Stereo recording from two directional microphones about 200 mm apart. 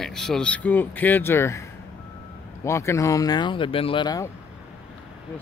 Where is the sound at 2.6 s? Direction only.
15° left (ahead or behind).